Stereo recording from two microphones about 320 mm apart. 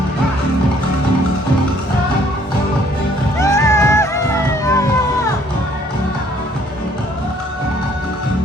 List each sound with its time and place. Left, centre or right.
3.4 s music: centre